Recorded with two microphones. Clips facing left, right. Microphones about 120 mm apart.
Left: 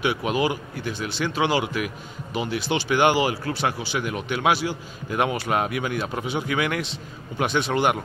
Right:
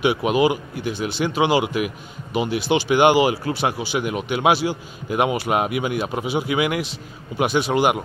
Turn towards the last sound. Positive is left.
turn(degrees=-10)  # may be behind; listen again after turning